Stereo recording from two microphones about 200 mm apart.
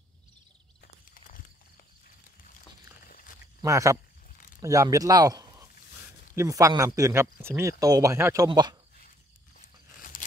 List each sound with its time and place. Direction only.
1.1 s a sound: 45° left (ahead or behind)
3.6 s speech: 15° right (ahead or behind)
10.1 s tearing: 45° left (ahead or behind)